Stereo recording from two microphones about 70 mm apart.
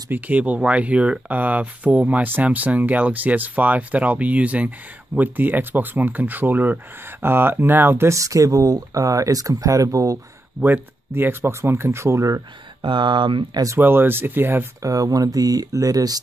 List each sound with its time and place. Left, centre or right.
0.1 s speech: right
8.1 s speech: right
10.6 s speech: right
13.1 s speech: right
13.7 s speech: right
14.8 s speech: right